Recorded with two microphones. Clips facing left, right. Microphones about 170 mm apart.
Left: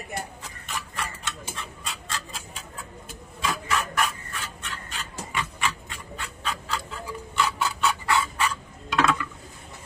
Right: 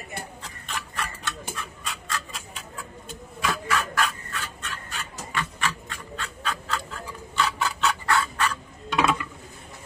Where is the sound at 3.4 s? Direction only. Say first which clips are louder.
Right 1 dB; 20° left (ahead or behind).